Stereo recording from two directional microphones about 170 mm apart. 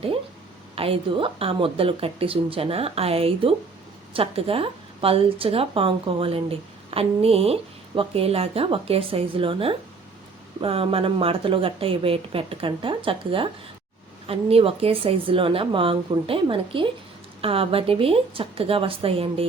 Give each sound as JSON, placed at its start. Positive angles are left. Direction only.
{"t": 0.8, "sound": "speech", "side_deg": -30}